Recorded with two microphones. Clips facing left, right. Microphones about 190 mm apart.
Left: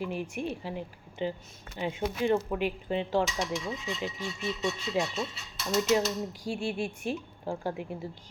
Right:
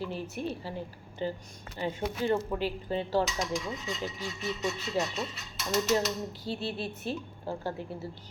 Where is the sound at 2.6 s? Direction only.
35° right (ahead or behind).